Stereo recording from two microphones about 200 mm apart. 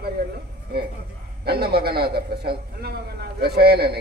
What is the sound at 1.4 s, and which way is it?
A man's voice, 50° right (ahead or behind).